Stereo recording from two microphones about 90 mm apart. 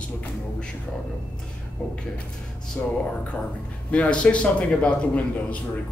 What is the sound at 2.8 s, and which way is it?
Speech, 15° left (ahead or behind).